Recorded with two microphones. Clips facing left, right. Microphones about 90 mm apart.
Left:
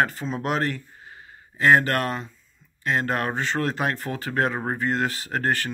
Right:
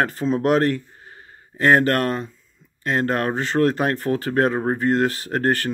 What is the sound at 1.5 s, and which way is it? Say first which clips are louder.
Speech: right 2 dB; 40° right (ahead or behind).